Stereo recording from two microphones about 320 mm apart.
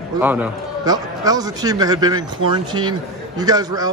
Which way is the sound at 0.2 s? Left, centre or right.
Centre.